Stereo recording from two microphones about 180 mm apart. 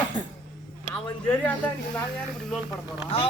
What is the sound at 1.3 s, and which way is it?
Speech, 5° left (ahead or behind).